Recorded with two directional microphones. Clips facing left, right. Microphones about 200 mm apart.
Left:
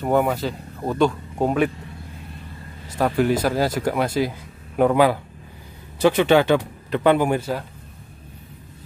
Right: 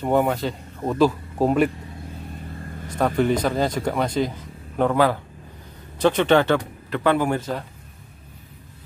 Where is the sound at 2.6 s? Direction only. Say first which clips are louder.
Right 5 dB; 50° right (ahead or behind).